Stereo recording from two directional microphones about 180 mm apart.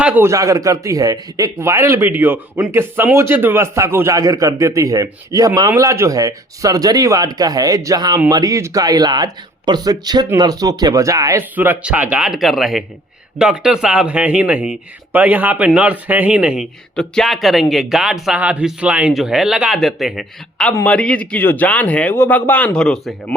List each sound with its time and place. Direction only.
0.0 s a man's voice: 10° right (ahead or behind)